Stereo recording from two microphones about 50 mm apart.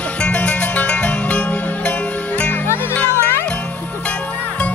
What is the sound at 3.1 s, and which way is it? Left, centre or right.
Music, left.